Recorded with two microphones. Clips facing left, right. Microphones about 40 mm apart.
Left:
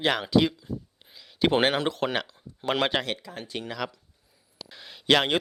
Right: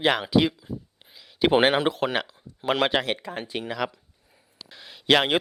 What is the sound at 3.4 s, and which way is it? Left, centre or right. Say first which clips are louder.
Speech: right 3 dB; centre.